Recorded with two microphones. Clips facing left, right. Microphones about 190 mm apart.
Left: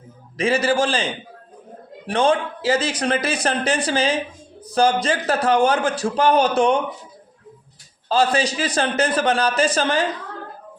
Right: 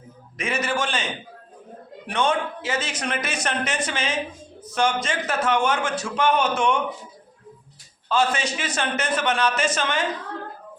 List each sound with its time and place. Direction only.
0.3 s a man's voice: 30° left (ahead or behind)
2.0 s a man's voice: 30° left (ahead or behind)
8.1 s a man's voice: 35° left (ahead or behind)